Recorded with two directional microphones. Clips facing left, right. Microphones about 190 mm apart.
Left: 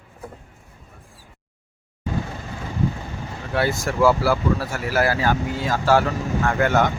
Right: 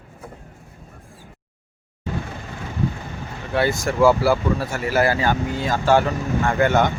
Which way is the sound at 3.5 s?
5° left (ahead or behind).